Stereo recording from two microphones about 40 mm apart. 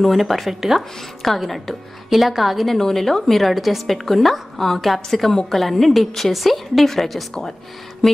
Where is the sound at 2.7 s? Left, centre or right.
Centre.